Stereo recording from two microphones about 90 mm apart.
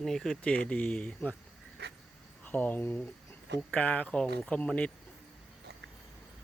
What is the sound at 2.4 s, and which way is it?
Speech, 20° left (ahead or behind).